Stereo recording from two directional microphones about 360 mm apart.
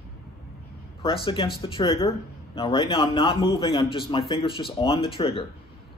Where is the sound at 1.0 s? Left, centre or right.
Centre.